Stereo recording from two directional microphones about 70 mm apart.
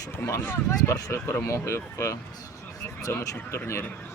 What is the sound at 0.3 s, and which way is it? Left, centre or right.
Speech, left.